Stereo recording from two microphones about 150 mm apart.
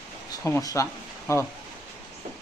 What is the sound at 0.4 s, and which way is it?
Speech, 20° left (ahead or behind).